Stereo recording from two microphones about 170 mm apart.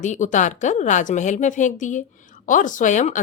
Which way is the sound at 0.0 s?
45° left (ahead or behind).